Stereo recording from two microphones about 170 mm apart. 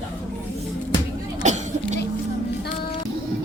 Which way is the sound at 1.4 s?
45° right (ahead or behind).